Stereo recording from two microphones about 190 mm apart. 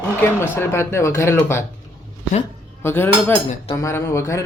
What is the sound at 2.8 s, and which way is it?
Speech, 10° left (ahead or behind).